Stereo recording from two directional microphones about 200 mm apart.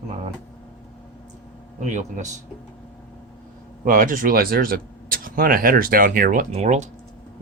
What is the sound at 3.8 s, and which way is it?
Speech, 45° right (ahead or behind).